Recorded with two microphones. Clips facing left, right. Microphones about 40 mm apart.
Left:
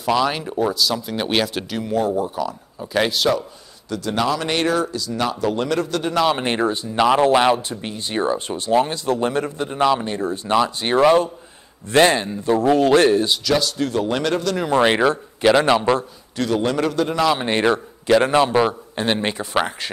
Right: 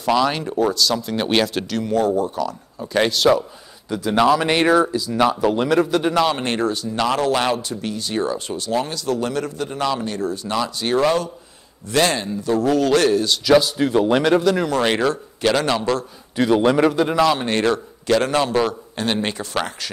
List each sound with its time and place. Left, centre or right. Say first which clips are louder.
0.0 s speech: right 1 dB; centre
3.9 s speech: right 5 dB; centre
6.1 s speech: left 3 dB; centre
6.4 s a man's voice: left 1 dB; left
13.4 s speech: right 5 dB; centre
14.7 s a man's voice: left 3 dB; centre
16.3 s speech: right 4 dB; centre
17.3 s a man's voice: left 1 dB; centre